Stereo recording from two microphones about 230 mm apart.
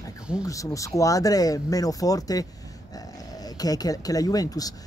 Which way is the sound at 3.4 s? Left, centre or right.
Centre.